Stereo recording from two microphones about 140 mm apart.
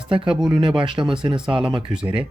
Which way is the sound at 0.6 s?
35° right (ahead or behind).